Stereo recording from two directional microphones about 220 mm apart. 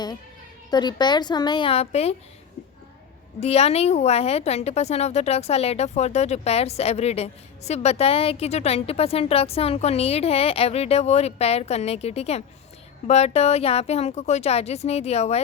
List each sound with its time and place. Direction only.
0.7 s a woman's voice: 20° left (ahead or behind)
3.4 s a woman's voice: 30° left (ahead or behind)